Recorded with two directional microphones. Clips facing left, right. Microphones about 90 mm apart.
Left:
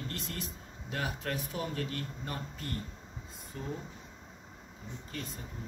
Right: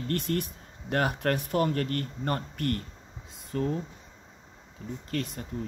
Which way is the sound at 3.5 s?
90° right.